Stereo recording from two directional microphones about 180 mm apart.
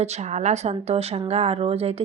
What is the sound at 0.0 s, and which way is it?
A woman's voice, 40° right (ahead or behind).